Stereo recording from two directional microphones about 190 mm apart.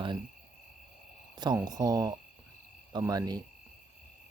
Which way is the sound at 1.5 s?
20° right (ahead or behind).